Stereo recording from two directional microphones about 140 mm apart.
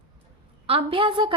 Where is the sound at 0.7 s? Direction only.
40° right (ahead or behind).